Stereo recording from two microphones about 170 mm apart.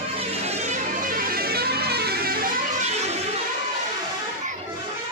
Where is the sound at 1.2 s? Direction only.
60° right (ahead or behind).